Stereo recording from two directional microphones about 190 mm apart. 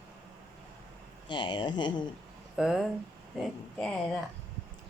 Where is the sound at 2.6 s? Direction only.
5° right (ahead or behind).